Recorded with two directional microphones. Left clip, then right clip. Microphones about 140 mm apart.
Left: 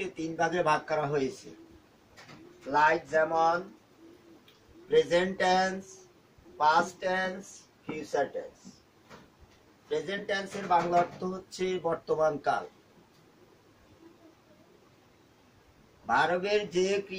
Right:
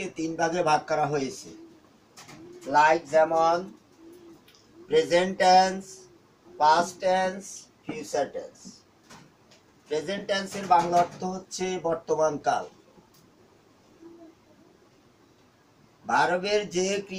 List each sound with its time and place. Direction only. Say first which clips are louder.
0.1 s speech: right 4 dB; 25° left (ahead or behind)
2.7 s speech: right 5 dB; 15° left (ahead or behind)
4.8 s speech: right 3 dB; 15° left (ahead or behind)
9.8 s speech: right 3 dB; 20° left (ahead or behind)
16.1 s speech: right 3 dB; 25° left (ahead or behind)